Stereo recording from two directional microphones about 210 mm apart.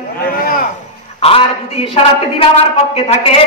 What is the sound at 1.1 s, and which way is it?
Speech, 25° left (ahead or behind).